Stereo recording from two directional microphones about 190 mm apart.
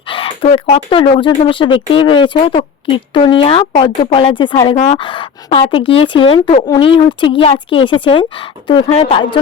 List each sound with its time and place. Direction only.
0.1 s speech: 30° left (ahead or behind)